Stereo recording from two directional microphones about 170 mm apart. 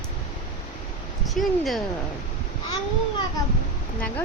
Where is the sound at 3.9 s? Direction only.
10° left (ahead or behind).